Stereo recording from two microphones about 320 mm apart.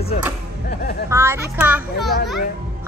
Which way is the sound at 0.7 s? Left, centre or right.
Left.